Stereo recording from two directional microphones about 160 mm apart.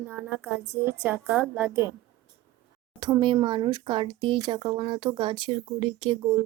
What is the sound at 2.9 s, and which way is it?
Speech, 25° right (ahead or behind).